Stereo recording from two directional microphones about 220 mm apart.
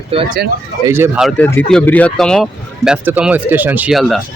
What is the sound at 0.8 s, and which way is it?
Speech, 10° right (ahead or behind).